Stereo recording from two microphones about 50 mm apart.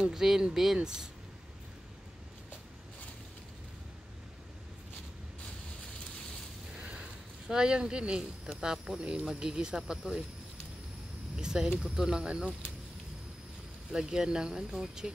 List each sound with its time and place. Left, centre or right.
0.0 s speech: centre
6.7 s a sound: right
7.4 s speech: centre
11.3 s speech: centre
13.9 s speech: centre